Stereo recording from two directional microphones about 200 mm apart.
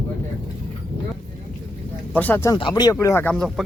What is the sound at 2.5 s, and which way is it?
Speech, 20° left (ahead or behind).